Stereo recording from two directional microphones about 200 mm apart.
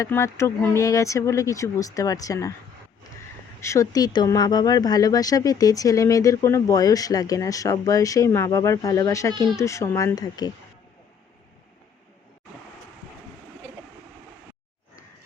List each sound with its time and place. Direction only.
0.0 s speech: 15° left (ahead or behind)
3.6 s speech: 15° left (ahead or behind)